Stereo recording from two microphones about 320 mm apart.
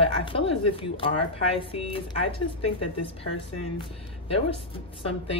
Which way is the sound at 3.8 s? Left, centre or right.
Centre.